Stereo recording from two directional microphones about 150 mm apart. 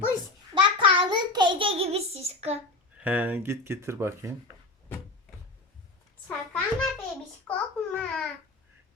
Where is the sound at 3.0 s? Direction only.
10° right (ahead or behind).